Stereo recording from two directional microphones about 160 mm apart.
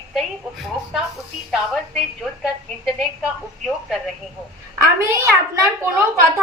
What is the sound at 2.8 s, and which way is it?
A woman's voice, centre (ahead or behind).